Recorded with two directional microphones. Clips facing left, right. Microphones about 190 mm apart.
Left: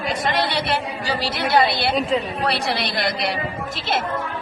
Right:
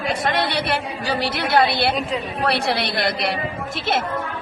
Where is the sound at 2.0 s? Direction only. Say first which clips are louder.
Left 4 dB; centre (ahead or behind).